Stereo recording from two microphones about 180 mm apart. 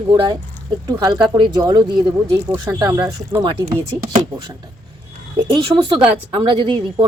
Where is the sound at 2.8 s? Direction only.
20° right (ahead or behind).